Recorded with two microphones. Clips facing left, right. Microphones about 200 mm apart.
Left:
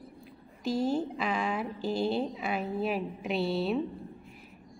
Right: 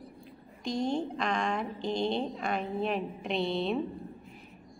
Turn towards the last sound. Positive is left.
turn(degrees=5)  # may be behind; listen again after turning